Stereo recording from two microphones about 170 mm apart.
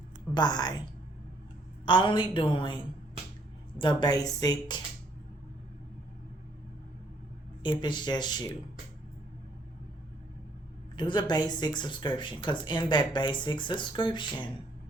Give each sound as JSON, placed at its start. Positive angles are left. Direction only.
{"t": 0.3, "sound": "speech", "side_deg": 25}
{"t": 1.8, "sound": "speech", "side_deg": 30}
{"t": 7.6, "sound": "speech", "side_deg": 30}
{"t": 10.9, "sound": "speech", "side_deg": 25}